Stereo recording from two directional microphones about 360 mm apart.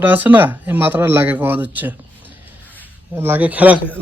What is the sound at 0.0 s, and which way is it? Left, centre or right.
A man's voice, centre.